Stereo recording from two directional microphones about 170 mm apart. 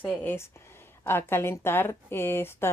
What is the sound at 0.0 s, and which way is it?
Speech, 10° left (ahead or behind).